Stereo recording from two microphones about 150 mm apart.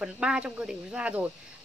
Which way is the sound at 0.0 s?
5° right (ahead or behind).